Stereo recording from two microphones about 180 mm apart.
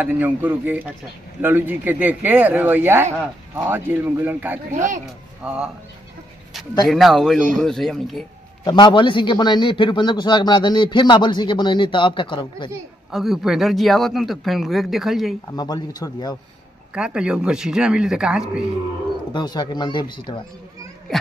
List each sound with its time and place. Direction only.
0.0 s speech: 10° right (ahead or behind)
4.7 s speech: 45° right (ahead or behind)
5.4 s a man's voice: 5° right (ahead or behind)
6.9 s a man's voice: centre (ahead or behind)
8.6 s a man's voice: 25° left (ahead or behind)
13.1 s a man's voice: centre (ahead or behind)
15.5 s a man's voice: 20° left (ahead or behind)
16.9 s a man's voice: 5° right (ahead or behind)
19.3 s a man's voice: 25° left (ahead or behind)